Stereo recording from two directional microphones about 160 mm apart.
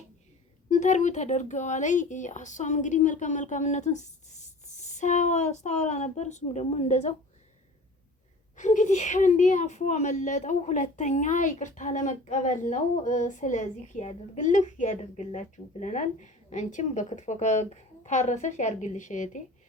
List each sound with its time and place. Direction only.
0.7 s a woman's voice: 50° left (ahead or behind)
8.5 s a woman's voice: 50° left (ahead or behind)